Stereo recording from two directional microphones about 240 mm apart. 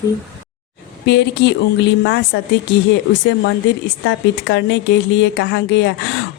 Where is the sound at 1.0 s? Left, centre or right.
Left.